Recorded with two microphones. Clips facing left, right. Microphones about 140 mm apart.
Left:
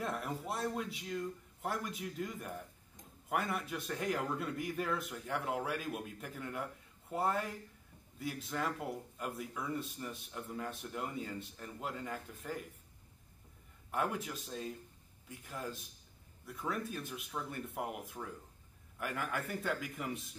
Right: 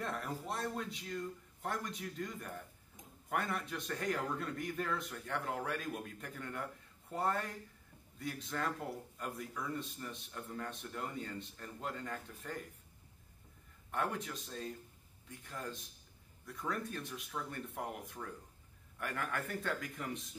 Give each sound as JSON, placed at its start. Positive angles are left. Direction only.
{"t": 0.0, "sound": "a man's voice", "side_deg": 5}
{"t": 13.9, "sound": "a man's voice", "side_deg": 5}